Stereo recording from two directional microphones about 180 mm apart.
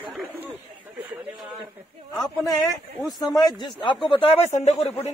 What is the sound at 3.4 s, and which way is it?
Speech, 25° left (ahead or behind).